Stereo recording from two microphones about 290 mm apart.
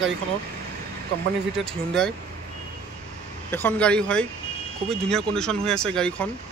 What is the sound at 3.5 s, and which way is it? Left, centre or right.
Speech, centre.